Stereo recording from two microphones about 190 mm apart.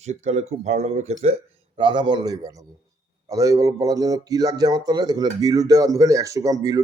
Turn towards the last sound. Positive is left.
turn(degrees=-20)  # may be behind; listen again after turning